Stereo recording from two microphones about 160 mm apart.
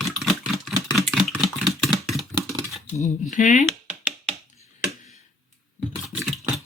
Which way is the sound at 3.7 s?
10° right (ahead or behind).